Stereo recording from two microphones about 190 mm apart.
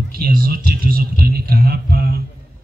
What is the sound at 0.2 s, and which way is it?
A man's voice, 55° right (ahead or behind).